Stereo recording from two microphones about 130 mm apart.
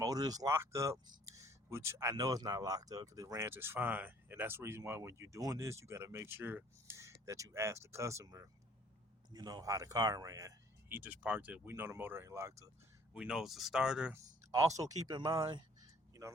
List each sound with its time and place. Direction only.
0.0 s speech: 30° right (ahead or behind)
13.1 s speech: 5° right (ahead or behind)
14.5 s speech: 25° right (ahead or behind)